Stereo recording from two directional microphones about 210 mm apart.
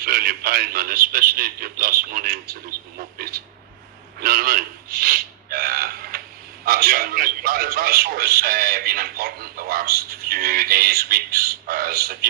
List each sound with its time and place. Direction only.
0.0 s a man's voice: 45° right (ahead or behind)